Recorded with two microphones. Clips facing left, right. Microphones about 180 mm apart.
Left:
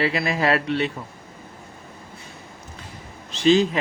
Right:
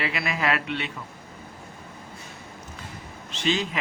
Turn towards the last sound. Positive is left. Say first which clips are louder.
# left 9 dB
turn(degrees=35)  # may be behind; listen again after turning